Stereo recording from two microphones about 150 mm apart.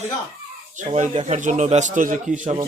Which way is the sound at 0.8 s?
50° right (ahead or behind).